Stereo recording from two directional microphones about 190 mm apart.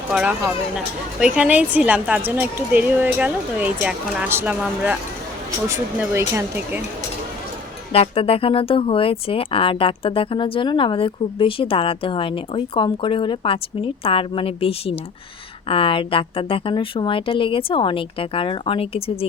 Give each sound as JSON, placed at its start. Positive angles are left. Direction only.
{"t": 0.1, "sound": "speech", "side_deg": -5}
{"t": 7.9, "sound": "speech", "side_deg": 30}